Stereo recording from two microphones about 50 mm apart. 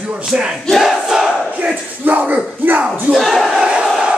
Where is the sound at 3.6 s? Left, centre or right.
Centre.